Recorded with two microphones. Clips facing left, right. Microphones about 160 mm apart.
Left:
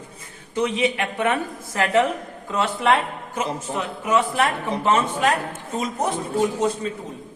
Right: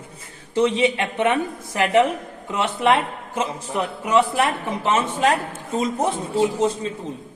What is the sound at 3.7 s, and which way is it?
Speech, 35° left (ahead or behind).